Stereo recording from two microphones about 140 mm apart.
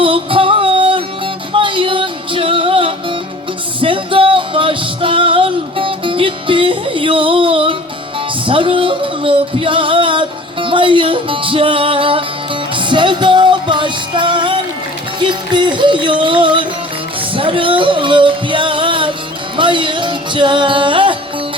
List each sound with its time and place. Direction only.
0.0 s music: 40° right (ahead or behind)